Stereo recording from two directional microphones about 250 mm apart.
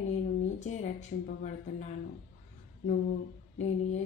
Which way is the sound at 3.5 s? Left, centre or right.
Left.